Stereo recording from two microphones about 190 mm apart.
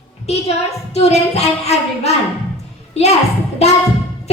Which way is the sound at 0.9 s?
35° left (ahead or behind).